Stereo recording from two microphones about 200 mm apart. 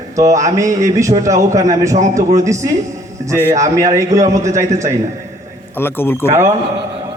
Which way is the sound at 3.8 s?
15° right (ahead or behind).